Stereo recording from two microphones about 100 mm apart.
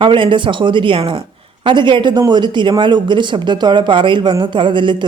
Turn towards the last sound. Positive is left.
turn(degrees=-55)  # may be behind; listen again after turning